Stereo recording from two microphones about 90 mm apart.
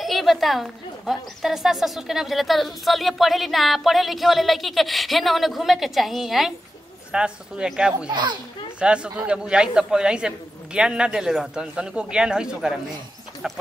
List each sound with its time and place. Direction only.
0.0 s a woman's voice: centre (ahead or behind)
8.1 s a child's voice: 55° right (ahead or behind)
8.7 s a man's voice: 10° right (ahead or behind)